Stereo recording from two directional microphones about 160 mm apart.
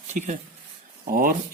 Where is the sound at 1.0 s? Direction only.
60° right (ahead or behind).